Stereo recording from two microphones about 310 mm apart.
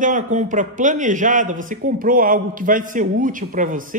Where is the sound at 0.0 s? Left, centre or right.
Right.